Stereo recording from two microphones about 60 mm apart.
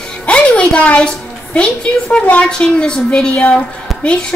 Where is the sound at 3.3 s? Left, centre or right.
Left.